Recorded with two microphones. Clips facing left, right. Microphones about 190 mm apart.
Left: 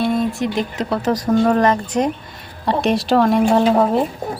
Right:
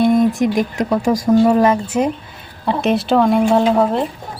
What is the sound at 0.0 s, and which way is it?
A woman's voice, 15° right (ahead or behind).